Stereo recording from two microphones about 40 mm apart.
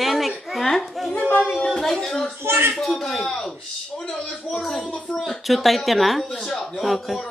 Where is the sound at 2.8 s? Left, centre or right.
Centre.